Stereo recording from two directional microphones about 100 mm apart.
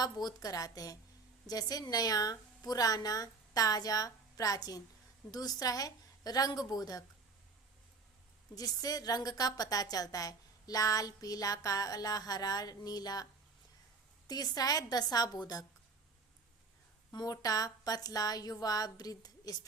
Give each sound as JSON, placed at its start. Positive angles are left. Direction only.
{"t": 0.0, "sound": "a woman's voice", "side_deg": 40}
{"t": 8.5, "sound": "a woman's voice", "side_deg": 40}
{"t": 14.3, "sound": "a woman's voice", "side_deg": 40}
{"t": 17.1, "sound": "a woman's voice", "side_deg": 45}